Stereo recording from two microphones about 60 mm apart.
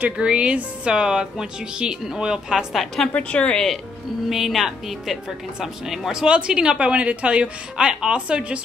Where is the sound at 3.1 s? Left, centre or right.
Left.